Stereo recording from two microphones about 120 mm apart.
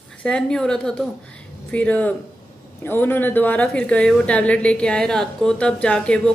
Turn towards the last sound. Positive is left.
turn(degrees=10)  # may be behind; listen again after turning